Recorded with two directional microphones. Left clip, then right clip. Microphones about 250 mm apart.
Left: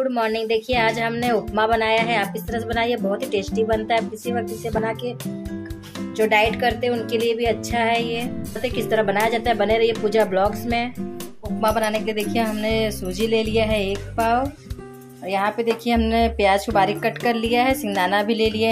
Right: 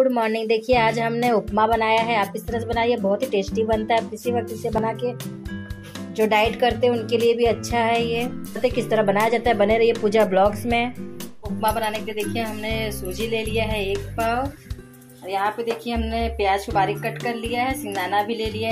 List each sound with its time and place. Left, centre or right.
0.1 s speech: centre
6.1 s speech: centre
11.6 s speech: centre